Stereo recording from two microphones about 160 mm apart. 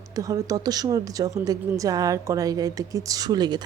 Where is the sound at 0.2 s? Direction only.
20° right (ahead or behind).